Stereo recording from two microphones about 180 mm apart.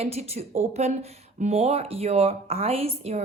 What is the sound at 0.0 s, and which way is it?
Speech, 35° right (ahead or behind).